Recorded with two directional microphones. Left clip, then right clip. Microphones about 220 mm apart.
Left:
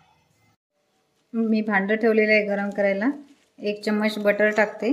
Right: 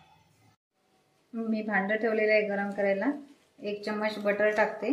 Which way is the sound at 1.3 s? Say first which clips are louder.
Left 7 dB; 50° left (ahead or behind).